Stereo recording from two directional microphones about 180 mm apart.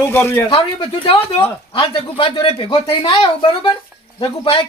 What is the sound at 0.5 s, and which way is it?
Speech, 30° left (ahead or behind).